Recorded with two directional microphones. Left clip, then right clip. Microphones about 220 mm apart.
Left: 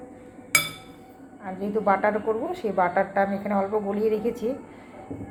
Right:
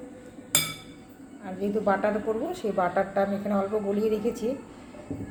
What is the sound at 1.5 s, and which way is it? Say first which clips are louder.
A woman's voice: left 3 dB; centre (ahead or behind).